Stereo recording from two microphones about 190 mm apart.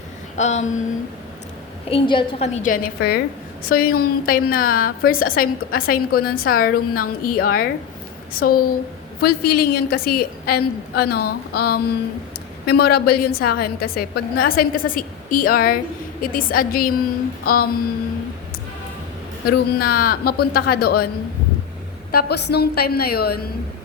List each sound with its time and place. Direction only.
0.3 s a woman's voice: 35° left (ahead or behind)
1.9 s a woman's voice: 30° left (ahead or behind); by 17.7 s 50° left (ahead or behind)
19.5 s a woman's voice: 55° left (ahead or behind)
22.1 s a woman's voice: 55° left (ahead or behind)